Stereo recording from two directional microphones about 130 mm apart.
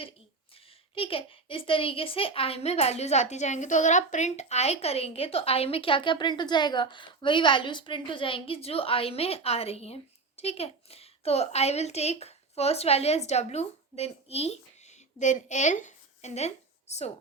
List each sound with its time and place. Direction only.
0.5 s a woman's voice: 45° left (ahead or behind)